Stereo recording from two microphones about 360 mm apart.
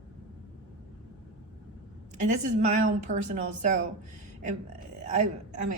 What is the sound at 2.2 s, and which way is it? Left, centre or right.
A woman's voice, centre.